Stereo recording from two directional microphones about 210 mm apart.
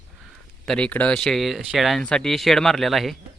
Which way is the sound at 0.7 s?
5° left (ahead or behind).